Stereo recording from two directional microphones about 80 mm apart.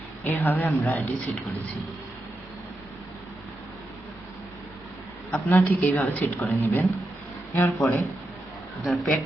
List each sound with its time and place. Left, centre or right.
0.3 s a woman's voice: left
5.3 s a woman's voice: left
8.8 s speech: centre